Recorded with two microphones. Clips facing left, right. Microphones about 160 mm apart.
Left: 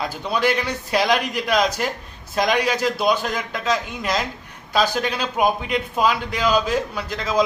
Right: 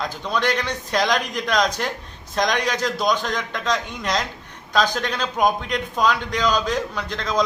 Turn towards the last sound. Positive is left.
turn(degrees=5)  # may be behind; listen again after turning